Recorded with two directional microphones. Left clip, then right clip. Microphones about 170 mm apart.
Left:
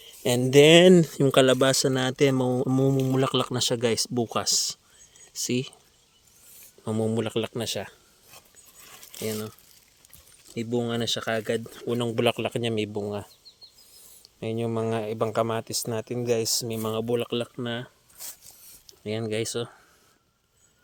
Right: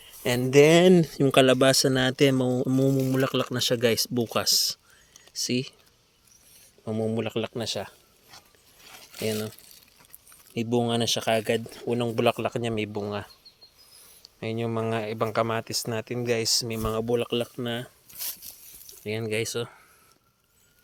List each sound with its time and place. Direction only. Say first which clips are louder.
0.0 s speech: left 2 dB; 25° left (ahead or behind); by 2.3 s centre (ahead or behind)
2.3 s speech: even; 10° left (ahead or behind)
5.4 s speech: even; 15° left (ahead or behind)
6.8 s speech: left 1 dB; 30° left (ahead or behind)
9.1 s speech: right 2 dB; 10° right (ahead or behind)
10.6 s speech: right 3 dB; 10° right (ahead or behind)
11.7 s speech: even; 10° left (ahead or behind)
18.5 s a sound: right 4 dB; 35° right (ahead or behind)
18.9 s speech: even; 20° left (ahead or behind)